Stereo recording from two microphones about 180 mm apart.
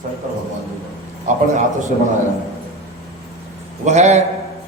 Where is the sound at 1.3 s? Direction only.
45° right (ahead or behind).